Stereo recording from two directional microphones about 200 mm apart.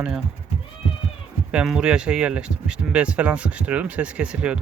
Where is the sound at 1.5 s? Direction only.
5° right (ahead or behind).